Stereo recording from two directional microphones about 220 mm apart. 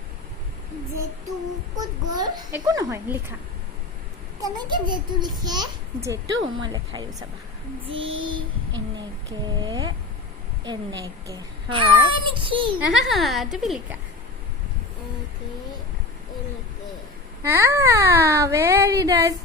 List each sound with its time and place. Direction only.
1.7 s speech: 15° right (ahead or behind)
4.4 s a child's voice: 15° right (ahead or behind)
9.6 s a child's voice: 20° right (ahead or behind)
12.9 s a woman's voice: centre (ahead or behind)
17.4 s speech: 10° right (ahead or behind)